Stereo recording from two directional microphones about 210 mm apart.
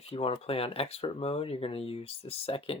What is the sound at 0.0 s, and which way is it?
Speech, 30° left (ahead or behind).